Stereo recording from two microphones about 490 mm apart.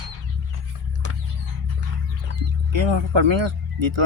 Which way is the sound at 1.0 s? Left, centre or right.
Right.